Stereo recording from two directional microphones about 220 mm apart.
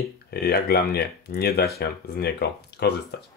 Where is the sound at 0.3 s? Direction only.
45° left (ahead or behind).